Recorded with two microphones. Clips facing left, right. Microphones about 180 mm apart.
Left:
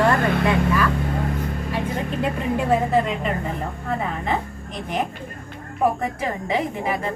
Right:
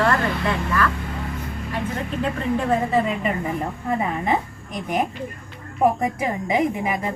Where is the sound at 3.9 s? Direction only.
10° right (ahead or behind).